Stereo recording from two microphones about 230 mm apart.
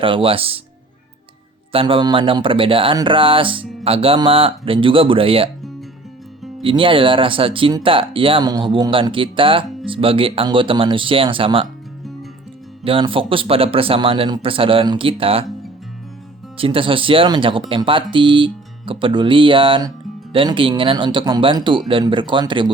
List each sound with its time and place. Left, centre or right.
0.0 s speech: right
1.7 s speech: right
6.6 s speech: right
12.8 s speech: right
16.6 s speech: right